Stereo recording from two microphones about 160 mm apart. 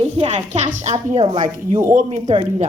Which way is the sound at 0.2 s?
35° right (ahead or behind).